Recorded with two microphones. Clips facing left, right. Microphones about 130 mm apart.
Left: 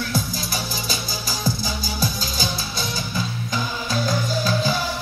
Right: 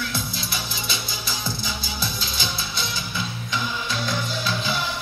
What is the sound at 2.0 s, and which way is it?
Music, 40° left (ahead or behind).